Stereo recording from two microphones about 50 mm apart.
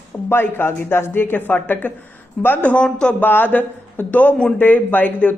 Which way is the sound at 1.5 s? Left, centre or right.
Left.